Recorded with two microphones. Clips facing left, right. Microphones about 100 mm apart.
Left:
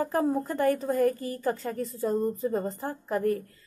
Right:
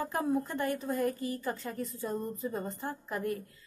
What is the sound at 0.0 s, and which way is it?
Speech, 35° left (ahead or behind).